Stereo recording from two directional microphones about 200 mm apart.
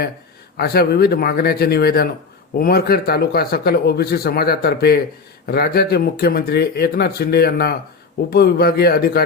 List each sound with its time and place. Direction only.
0.5 s speech: 50° left (ahead or behind)